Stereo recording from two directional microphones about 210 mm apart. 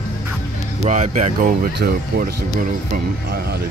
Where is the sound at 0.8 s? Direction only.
35° right (ahead or behind).